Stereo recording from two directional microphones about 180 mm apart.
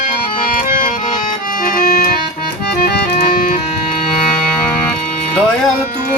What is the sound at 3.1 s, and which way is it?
Music, 50° left (ahead or behind).